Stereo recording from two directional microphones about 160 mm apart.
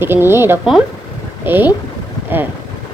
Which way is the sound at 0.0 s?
15° right (ahead or behind).